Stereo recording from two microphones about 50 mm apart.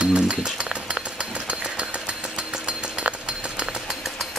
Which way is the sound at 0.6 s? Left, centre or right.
Centre.